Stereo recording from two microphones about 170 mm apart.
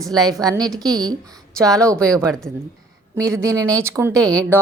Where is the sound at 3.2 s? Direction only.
20° right (ahead or behind).